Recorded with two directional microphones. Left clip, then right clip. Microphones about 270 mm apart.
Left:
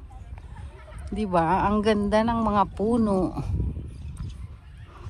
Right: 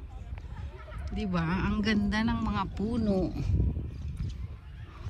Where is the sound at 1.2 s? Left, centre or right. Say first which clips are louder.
Left 12 dB; centre.